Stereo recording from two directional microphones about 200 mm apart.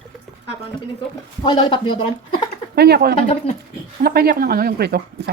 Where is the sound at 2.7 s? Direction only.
55° right (ahead or behind).